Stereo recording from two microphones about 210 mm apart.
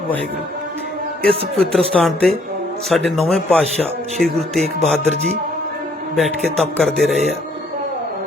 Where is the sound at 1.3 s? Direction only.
25° right (ahead or behind).